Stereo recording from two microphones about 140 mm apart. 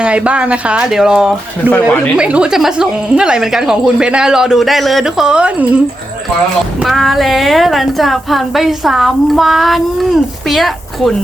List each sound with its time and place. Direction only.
0.0 s speech: 10° right (ahead or behind)
1.7 s speech: 10° left (ahead or behind)
2.1 s a woman's voice: 10° right (ahead or behind)
6.8 s a woman's voice: centre (ahead or behind)